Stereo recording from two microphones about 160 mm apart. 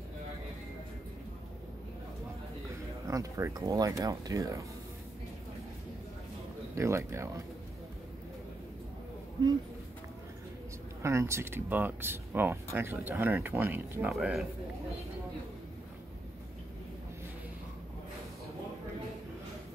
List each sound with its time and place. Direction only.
3.1 s speech: 20° right (ahead or behind)
6.7 s speech: 20° right (ahead or behind)
11.0 s speech: 15° right (ahead or behind)
14.1 s speech: 5° right (ahead or behind)